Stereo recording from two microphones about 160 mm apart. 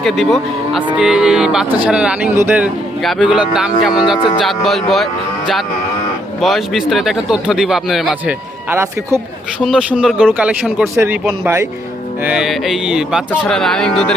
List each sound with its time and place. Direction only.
0.0 s speech: centre (ahead or behind); by 2.6 s 15° right (ahead or behind)
3.0 s speech: centre (ahead or behind)
6.4 s speech: centre (ahead or behind)
8.7 s speech: 15° right (ahead or behind)
9.6 s speech: 5° right (ahead or behind)